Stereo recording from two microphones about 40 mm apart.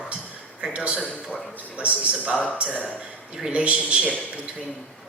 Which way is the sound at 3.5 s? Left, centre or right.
Right.